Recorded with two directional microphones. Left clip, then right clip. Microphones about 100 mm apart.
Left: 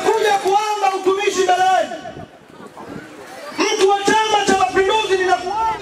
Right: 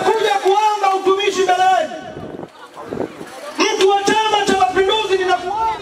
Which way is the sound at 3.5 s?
30° right (ahead or behind).